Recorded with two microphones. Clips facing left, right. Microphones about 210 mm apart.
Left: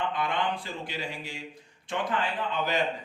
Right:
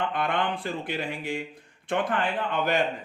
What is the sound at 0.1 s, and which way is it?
Speech, 55° right (ahead or behind).